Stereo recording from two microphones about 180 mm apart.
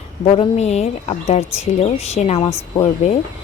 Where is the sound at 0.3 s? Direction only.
35° left (ahead or behind).